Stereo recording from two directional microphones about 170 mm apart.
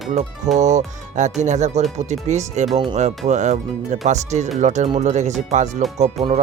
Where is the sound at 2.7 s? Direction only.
30° right (ahead or behind).